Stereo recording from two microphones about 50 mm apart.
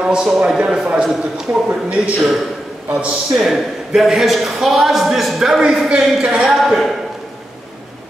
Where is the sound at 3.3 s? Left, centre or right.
Centre.